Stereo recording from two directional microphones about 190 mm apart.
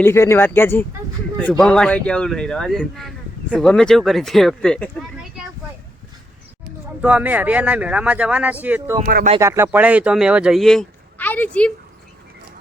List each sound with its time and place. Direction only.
0.0 s speech: 15° left (ahead or behind)
7.0 s speech: 5° right (ahead or behind)